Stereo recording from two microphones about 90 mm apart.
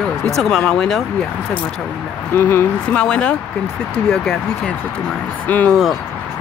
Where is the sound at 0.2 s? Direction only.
5° left (ahead or behind).